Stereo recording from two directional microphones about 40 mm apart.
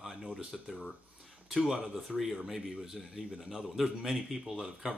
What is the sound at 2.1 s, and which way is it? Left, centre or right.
A man's voice, centre.